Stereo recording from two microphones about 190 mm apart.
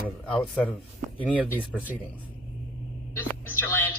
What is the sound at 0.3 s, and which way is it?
Speech, 5° left (ahead or behind).